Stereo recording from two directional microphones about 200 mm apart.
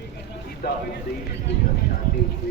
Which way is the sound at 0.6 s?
50° left (ahead or behind).